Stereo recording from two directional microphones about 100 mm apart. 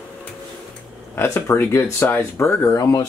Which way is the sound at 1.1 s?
25° left (ahead or behind).